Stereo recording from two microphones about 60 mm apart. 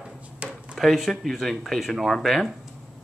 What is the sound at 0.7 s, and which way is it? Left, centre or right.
Speech, centre.